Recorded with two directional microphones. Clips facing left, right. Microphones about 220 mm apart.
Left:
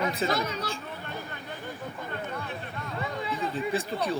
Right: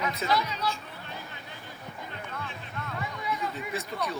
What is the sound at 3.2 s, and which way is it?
Speech, 30° left (ahead or behind).